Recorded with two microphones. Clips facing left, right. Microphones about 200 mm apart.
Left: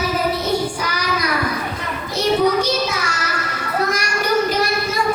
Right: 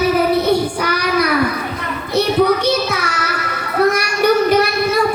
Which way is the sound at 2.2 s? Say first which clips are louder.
Right 2 dB; 60° right (ahead or behind).